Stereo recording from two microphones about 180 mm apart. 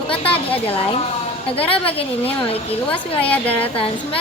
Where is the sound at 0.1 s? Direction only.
30° left (ahead or behind).